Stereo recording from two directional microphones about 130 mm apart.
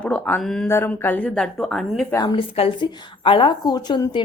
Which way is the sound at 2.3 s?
50° left (ahead or behind).